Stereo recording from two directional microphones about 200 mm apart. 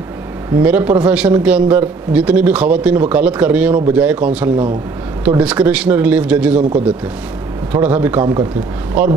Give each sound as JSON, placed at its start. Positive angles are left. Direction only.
{"t": 0.6, "sound": "a man's voice", "side_deg": -10}
{"t": 8.2, "sound": "speech", "side_deg": -20}